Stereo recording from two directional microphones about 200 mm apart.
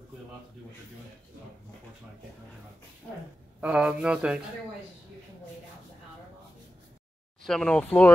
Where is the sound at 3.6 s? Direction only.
5° right (ahead or behind).